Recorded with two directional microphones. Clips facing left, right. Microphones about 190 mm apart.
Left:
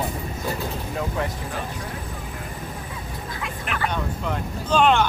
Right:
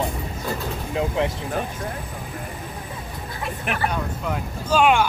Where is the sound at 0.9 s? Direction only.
20° right (ahead or behind).